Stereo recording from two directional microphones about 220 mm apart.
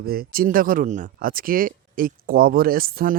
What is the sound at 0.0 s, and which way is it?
Speech, 45° right (ahead or behind).